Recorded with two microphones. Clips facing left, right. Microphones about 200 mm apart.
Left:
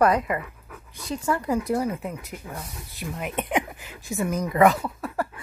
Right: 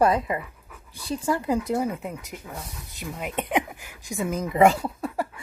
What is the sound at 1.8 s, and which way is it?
Speech, 15° right (ahead or behind).